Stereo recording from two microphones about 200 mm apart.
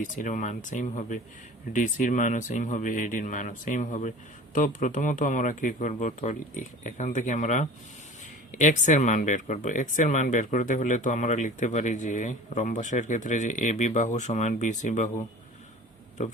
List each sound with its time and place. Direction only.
0.0 s speech: 40° left (ahead or behind)